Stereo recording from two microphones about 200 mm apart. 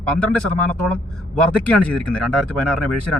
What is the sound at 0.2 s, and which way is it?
Speech, 5° left (ahead or behind).